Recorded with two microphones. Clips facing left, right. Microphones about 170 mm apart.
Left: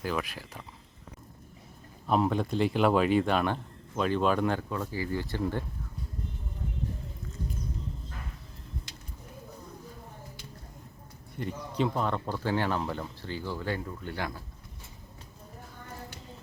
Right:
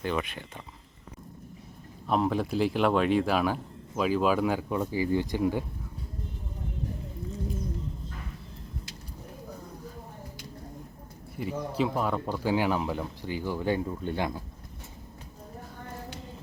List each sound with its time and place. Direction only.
0.0 s speech: centre (ahead or behind)
2.0 s speech: centre (ahead or behind)
4.7 s speech: 20° right (ahead or behind)
11.3 s speech: 5° right (ahead or behind)